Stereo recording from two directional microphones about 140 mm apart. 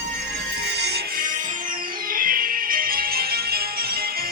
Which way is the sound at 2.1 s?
90° right.